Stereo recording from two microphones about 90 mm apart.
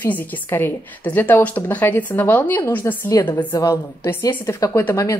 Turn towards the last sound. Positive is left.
turn(degrees=40)  # may be behind; listen again after turning